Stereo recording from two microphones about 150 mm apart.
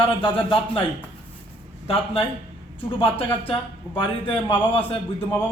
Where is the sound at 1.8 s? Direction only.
40° left (ahead or behind).